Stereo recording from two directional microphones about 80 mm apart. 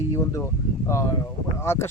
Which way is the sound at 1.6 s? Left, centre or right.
Left.